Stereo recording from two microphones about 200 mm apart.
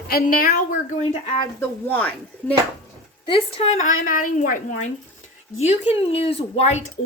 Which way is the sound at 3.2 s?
30° left (ahead or behind).